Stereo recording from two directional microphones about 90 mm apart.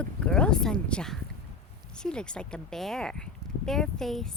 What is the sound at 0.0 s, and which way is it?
Speech, 10° left (ahead or behind).